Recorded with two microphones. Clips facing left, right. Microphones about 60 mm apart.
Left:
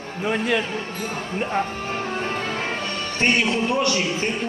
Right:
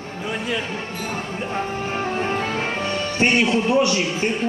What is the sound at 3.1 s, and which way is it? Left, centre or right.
A man's voice, centre.